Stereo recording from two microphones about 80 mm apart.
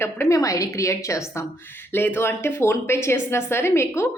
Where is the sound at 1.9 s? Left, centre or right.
Left.